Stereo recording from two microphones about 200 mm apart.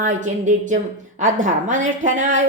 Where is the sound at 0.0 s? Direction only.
40° right (ahead or behind).